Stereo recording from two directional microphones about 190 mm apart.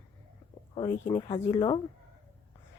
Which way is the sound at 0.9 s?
15° left (ahead or behind).